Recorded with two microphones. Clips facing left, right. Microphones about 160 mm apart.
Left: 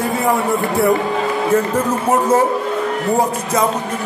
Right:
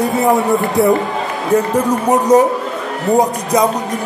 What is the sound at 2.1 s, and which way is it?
Speech, 15° right (ahead or behind).